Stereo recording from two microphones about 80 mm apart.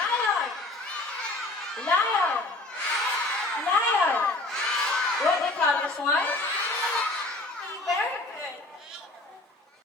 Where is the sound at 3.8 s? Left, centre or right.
Left.